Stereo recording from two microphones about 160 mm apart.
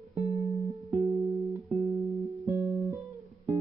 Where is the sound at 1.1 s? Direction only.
40° right (ahead or behind).